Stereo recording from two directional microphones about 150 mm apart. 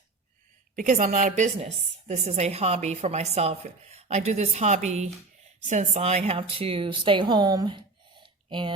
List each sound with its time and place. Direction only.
0.8 s a woman's voice: 60° right (ahead or behind); by 8.7 s 35° right (ahead or behind)